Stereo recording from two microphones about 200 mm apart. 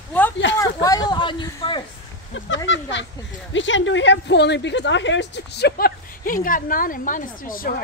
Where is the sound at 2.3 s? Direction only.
70° left (ahead or behind).